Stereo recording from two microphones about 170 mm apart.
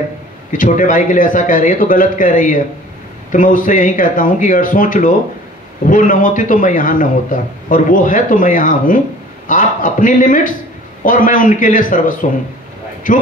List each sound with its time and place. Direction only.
0.5 s a man's voice: 50° left (ahead or behind)